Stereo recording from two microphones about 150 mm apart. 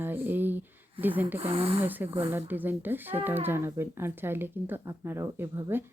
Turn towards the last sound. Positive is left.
turn(degrees=-15)  # may be behind; listen again after turning